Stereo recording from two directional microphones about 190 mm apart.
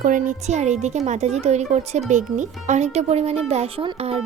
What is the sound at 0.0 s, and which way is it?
A child's voice, 40° right (ahead or behind).